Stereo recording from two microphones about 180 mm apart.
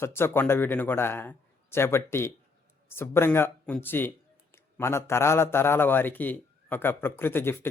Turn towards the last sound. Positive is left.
turn(degrees=10)  # may be behind; listen again after turning